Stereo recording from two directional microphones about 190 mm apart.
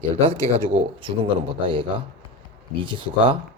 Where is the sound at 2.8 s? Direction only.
25° right (ahead or behind).